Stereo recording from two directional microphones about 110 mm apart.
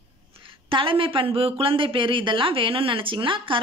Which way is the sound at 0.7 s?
50° right (ahead or behind).